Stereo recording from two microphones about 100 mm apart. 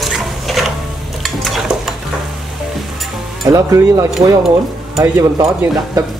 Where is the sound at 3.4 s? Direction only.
35° right (ahead or behind).